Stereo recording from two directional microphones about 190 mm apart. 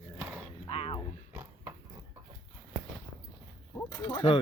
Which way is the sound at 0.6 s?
30° left (ahead or behind).